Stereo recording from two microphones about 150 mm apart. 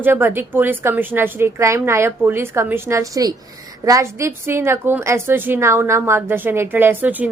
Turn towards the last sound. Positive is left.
turn(degrees=-10)  # may be behind; listen again after turning